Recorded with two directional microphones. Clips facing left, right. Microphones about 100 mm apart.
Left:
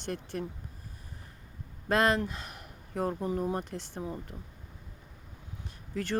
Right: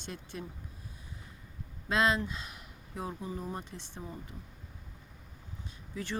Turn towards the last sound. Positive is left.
turn(degrees=55)  # may be behind; listen again after turning